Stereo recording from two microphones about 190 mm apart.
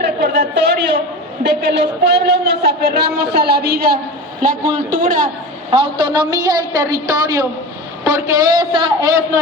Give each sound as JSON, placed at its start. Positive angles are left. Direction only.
{"t": 0.0, "sound": "a sound", "side_deg": -65}
{"t": 1.5, "sound": "a man's voice", "side_deg": -60}
{"t": 5.7, "sound": "a man's voice", "side_deg": -30}